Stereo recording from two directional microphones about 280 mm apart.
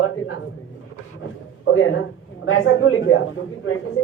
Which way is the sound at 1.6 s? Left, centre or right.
Left.